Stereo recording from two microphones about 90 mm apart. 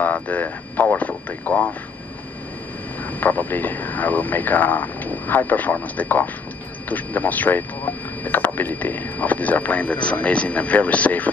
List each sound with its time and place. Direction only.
0.0 s speech: 15° left (ahead or behind)
3.1 s speech: 20° left (ahead or behind)